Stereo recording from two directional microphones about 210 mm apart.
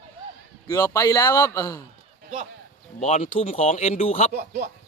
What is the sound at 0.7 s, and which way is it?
A man's voice, 15° left (ahead or behind).